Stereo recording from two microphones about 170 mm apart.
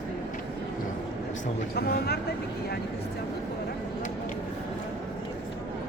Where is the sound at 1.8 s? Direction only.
65° left (ahead or behind).